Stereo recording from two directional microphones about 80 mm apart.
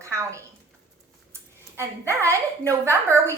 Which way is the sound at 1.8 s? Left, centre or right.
Right.